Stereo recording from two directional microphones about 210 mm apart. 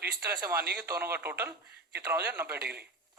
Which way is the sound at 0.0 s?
50° right (ahead or behind).